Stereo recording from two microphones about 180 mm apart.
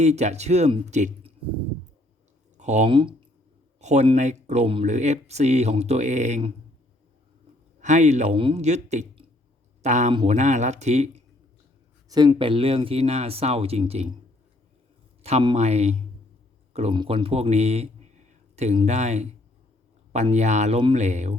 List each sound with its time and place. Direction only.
0.0 s speech: 40° right (ahead or behind)
2.6 s speech: 40° right (ahead or behind)
2.8 s speech: 25° right (ahead or behind)
3.8 s speech: 40° right (ahead or behind)
7.8 s speech: 40° right (ahead or behind)
10.1 s speech: 30° right (ahead or behind)
10.3 s speech: 40° right (ahead or behind)
12.0 s speech: 20° right (ahead or behind)
15.2 s speech: 35° right (ahead or behind)